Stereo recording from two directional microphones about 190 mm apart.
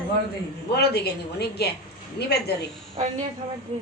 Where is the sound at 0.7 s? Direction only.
55° left (ahead or behind).